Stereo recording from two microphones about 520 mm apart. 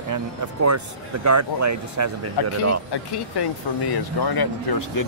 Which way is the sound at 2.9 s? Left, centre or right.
Left.